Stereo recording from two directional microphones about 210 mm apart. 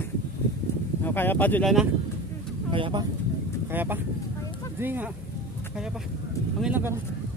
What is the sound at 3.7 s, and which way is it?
Speech, 10° right (ahead or behind).